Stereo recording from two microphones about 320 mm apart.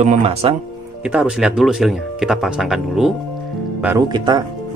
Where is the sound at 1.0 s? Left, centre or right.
Centre.